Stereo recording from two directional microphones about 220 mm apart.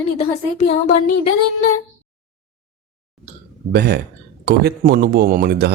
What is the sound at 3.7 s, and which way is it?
Speech, 45° right (ahead or behind).